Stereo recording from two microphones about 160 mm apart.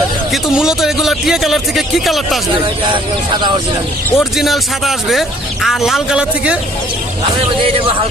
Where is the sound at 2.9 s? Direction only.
30° right (ahead or behind).